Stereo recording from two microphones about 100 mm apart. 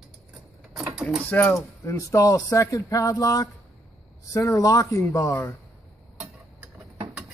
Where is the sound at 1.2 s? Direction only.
15° left (ahead or behind).